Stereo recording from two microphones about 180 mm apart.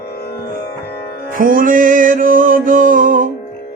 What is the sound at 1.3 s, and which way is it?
Music, 50° right (ahead or behind).